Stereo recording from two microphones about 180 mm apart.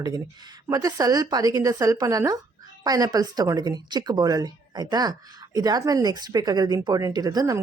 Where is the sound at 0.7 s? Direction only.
20° right (ahead or behind).